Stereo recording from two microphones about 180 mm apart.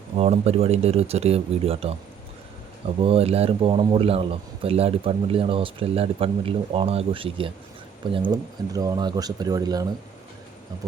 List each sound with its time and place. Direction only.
0.2 s a man's voice: 35° right (ahead or behind)
3.0 s a man's voice: 35° right (ahead or behind)